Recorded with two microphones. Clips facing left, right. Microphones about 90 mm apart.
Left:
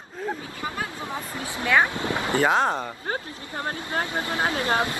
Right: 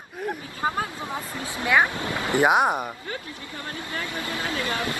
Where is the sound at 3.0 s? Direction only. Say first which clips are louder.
Left 4 dB; 35° left (ahead or behind).